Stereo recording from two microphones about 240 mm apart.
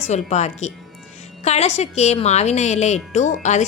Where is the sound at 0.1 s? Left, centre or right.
Left.